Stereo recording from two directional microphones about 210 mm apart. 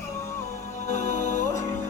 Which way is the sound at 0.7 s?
35° left (ahead or behind).